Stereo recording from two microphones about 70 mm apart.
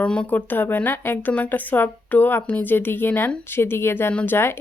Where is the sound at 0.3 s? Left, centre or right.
Left.